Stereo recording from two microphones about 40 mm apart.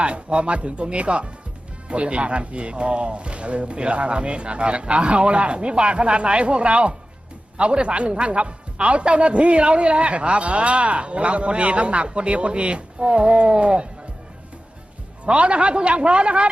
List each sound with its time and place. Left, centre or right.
0.0 s a man's voice: right
15.3 s a man's voice: right